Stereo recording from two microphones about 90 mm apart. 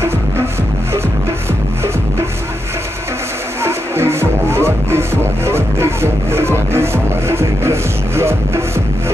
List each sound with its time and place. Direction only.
3.6 s music: 30° right (ahead or behind)